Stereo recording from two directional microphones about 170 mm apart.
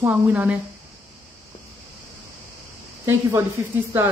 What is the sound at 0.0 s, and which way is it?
Speech, 10° right (ahead or behind).